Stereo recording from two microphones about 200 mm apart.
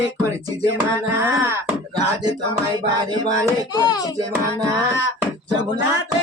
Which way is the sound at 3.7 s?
20° left (ahead or behind).